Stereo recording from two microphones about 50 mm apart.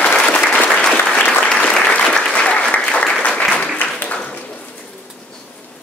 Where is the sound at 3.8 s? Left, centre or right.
Left.